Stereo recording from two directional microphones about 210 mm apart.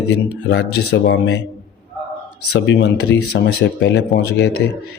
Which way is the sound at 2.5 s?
60° left (ahead or behind).